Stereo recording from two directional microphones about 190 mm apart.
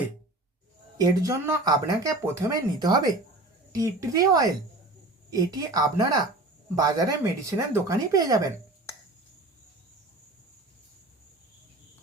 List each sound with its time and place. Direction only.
0.9 s speech: 15° right (ahead or behind)